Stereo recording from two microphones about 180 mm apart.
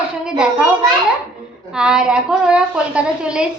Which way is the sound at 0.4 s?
5° right (ahead or behind).